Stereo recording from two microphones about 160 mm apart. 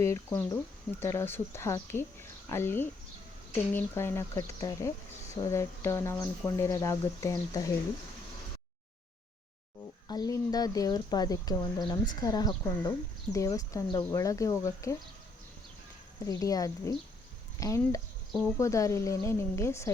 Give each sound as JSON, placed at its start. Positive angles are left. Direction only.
{"t": 0.0, "sound": "speech", "side_deg": 15}
{"t": 10.1, "sound": "speech", "side_deg": 25}
{"t": 16.2, "sound": "speech", "side_deg": 20}